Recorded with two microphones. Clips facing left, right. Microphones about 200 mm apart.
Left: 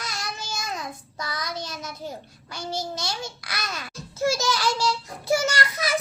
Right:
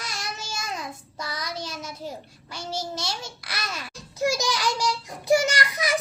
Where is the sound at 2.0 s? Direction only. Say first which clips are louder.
Even; 5° right (ahead or behind).